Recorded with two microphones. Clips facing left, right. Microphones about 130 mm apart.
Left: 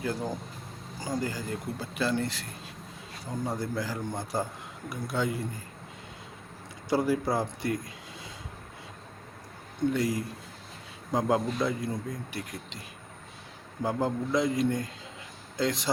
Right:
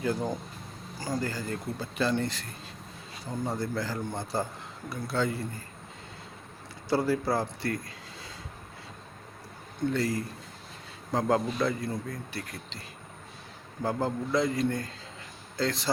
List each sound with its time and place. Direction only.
0.0 s speech: 5° left (ahead or behind)
6.9 s speech: 15° left (ahead or behind)
9.9 s speech: 10° left (ahead or behind)
13.8 s speech: 15° left (ahead or behind)